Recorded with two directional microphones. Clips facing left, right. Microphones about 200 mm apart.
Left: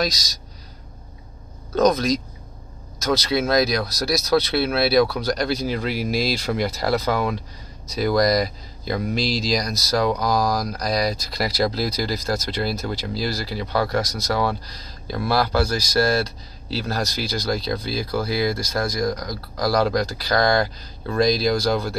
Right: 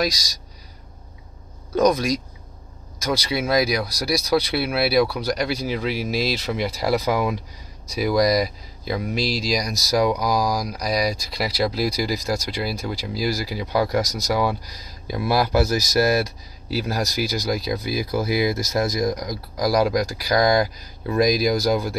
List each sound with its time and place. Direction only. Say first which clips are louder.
1.8 s speech: left 1 dB; 10° right (ahead or behind)